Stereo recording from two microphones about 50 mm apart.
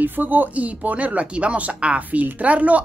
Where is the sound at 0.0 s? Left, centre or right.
Right.